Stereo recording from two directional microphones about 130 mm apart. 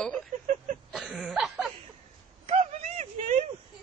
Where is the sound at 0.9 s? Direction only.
5° right (ahead or behind).